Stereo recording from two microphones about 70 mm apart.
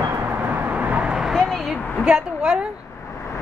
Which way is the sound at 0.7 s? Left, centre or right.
Centre.